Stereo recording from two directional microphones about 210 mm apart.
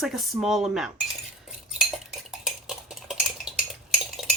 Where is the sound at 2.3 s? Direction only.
Centre (ahead or behind).